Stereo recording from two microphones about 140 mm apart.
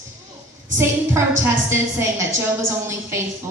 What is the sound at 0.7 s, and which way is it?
A woman's voice, 20° right (ahead or behind).